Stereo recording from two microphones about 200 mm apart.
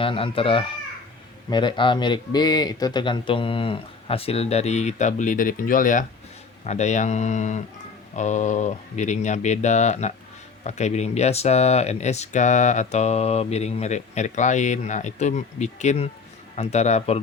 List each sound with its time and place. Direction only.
0.0 s a man's voice: 25° left (ahead or behind)